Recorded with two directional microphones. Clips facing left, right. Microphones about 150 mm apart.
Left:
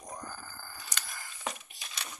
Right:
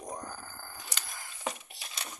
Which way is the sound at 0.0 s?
20° right (ahead or behind).